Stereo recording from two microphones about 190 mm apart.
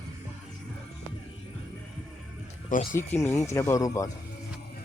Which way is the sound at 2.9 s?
10° left (ahead or behind).